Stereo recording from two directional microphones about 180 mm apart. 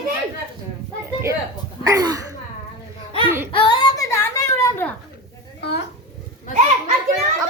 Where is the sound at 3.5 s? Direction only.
25° left (ahead or behind).